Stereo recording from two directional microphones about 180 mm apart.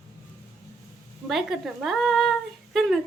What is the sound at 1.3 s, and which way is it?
A woman's voice, centre (ahead or behind).